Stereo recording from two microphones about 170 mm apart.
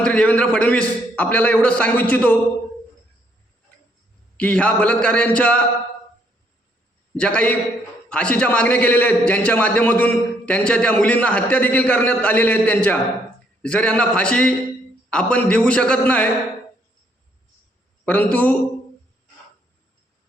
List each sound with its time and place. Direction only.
0.0 s a man's voice: 5° left (ahead or behind)
4.4 s a man's voice: 10° left (ahead or behind)
7.2 s a man's voice: 5° left (ahead or behind)
18.0 s a man's voice: 10° left (ahead or behind)